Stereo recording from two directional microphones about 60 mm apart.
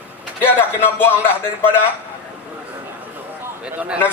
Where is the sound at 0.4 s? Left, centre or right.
Left.